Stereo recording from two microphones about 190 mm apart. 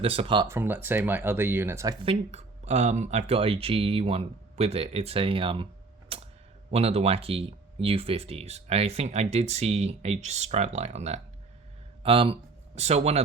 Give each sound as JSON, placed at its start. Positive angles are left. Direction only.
{"t": 0.0, "sound": "speech", "side_deg": -30}
{"t": 0.4, "sound": "speech", "side_deg": -10}
{"t": 2.0, "sound": "speech", "side_deg": -35}
{"t": 6.1, "sound": "a sound", "side_deg": -30}
{"t": 6.7, "sound": "speech", "side_deg": -30}